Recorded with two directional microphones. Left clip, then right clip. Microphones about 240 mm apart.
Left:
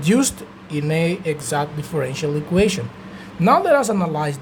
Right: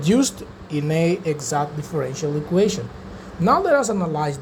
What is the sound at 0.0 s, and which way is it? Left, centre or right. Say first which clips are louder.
Speech: left 1 dB; centre.